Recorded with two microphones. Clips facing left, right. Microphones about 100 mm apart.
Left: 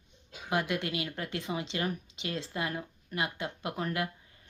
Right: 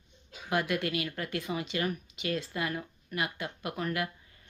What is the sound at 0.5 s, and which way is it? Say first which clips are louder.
Speech: right 1 dB; 20° left (ahead or behind).